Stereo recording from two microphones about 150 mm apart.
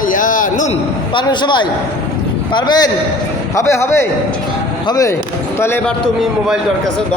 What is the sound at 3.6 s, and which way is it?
A man's voice, 20° left (ahead or behind).